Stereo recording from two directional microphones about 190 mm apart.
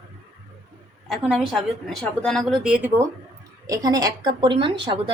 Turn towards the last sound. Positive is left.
turn(degrees=-25)  # may be behind; listen again after turning